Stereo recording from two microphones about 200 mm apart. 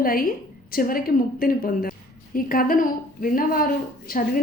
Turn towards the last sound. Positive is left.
turn(degrees=45)  # may be behind; listen again after turning